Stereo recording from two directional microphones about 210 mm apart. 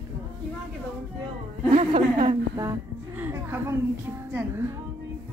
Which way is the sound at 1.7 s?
25° right (ahead or behind).